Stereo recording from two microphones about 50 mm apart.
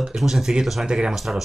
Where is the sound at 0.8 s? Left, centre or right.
Centre.